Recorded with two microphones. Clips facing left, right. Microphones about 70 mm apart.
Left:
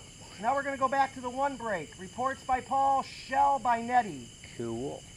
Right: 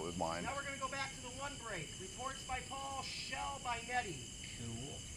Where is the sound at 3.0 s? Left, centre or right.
Left.